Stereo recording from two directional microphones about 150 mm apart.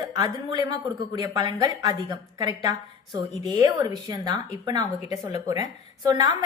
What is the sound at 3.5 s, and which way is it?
A woman's voice, 25° right (ahead or behind).